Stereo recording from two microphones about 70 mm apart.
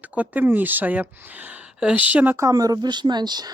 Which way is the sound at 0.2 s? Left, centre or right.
Right.